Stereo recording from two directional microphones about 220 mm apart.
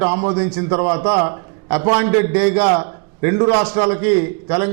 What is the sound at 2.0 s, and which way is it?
Speech, 10° right (ahead or behind).